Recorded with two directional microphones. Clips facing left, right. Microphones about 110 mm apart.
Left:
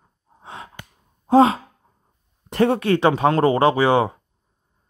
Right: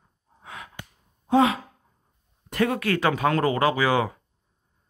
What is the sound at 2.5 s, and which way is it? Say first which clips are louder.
Speech: left 6 dB; 30° left (ahead or behind).